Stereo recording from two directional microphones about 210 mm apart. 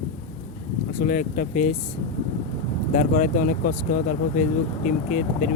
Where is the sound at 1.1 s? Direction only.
40° left (ahead or behind).